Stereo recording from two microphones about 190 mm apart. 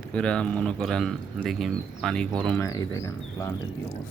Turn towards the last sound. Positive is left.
turn(degrees=15)  # may be behind; listen again after turning